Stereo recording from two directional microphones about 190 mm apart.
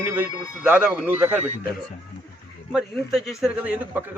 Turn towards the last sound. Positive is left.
turn(degrees=-5)  # may be behind; listen again after turning